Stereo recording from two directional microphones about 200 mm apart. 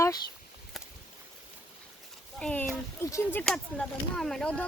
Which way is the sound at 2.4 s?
10° left (ahead or behind).